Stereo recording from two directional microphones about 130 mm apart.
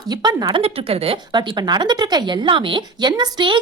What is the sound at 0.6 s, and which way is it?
Speech, 50° right (ahead or behind).